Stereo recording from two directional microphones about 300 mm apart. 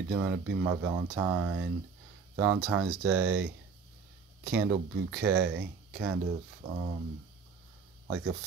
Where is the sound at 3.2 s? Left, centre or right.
Right.